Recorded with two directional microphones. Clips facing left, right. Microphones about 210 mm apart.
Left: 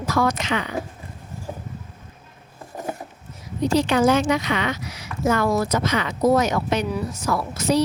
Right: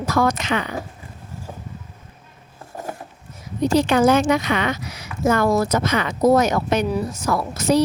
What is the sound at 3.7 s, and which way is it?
Speech, 50° right (ahead or behind).